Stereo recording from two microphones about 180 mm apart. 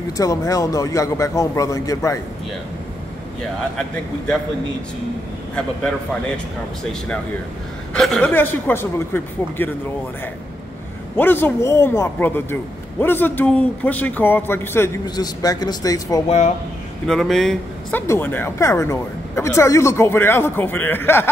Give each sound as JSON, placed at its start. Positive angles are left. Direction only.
{"t": 0.2, "sound": "a woman's voice", "side_deg": 20}
{"t": 3.7, "sound": "speech", "side_deg": 5}
{"t": 7.9, "sound": "a woman's voice", "side_deg": 5}
{"t": 11.1, "sound": "a woman's voice", "side_deg": 10}
{"t": 16.3, "sound": "speech", "side_deg": 40}
{"t": 17.1, "sound": "speech", "side_deg": 0}
{"t": 18.0, "sound": "a woman's voice", "side_deg": 15}